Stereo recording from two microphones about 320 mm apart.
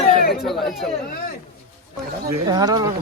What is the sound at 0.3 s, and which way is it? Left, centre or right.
Speech, centre.